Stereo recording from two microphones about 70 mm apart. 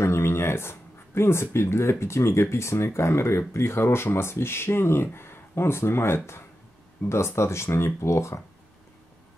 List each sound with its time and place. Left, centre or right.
0.0 s speech: left